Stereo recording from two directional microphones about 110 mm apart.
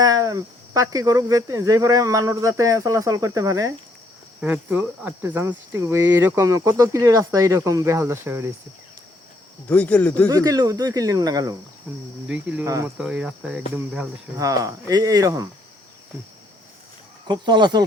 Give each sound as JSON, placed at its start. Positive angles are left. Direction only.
{"t": 0.0, "sound": "speech", "side_deg": -35}
{"t": 4.4, "sound": "speech", "side_deg": -15}
{"t": 9.6, "sound": "speech", "side_deg": 10}
{"t": 10.2, "sound": "speech", "side_deg": -35}
{"t": 12.3, "sound": "cricket", "side_deg": -10}
{"t": 12.6, "sound": "speech", "side_deg": -30}
{"t": 13.0, "sound": "cricket", "side_deg": -10}
{"t": 14.3, "sound": "speech", "side_deg": -30}
{"t": 17.2, "sound": "speech", "side_deg": -40}